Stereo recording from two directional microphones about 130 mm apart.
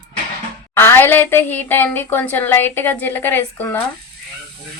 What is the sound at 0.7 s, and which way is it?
A woman's voice, 20° left (ahead or behind).